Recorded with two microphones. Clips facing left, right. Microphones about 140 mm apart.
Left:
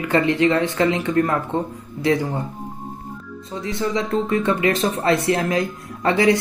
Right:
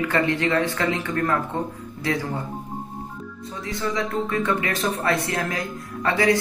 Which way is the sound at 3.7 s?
25° left (ahead or behind).